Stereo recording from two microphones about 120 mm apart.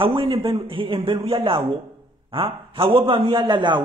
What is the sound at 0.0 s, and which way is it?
A man's voice, 50° right (ahead or behind).